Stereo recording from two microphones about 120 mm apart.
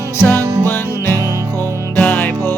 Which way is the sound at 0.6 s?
20° left (ahead or behind).